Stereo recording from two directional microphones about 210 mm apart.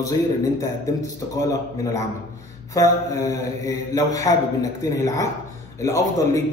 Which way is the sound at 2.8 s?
15° left (ahead or behind).